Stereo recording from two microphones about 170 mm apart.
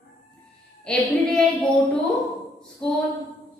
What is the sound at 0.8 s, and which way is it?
Speech, 5° left (ahead or behind).